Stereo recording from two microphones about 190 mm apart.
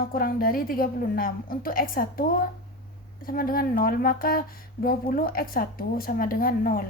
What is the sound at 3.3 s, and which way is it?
Speech, 50° left (ahead or behind).